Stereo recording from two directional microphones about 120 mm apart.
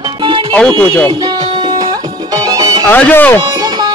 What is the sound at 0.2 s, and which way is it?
Music, 45° right (ahead or behind).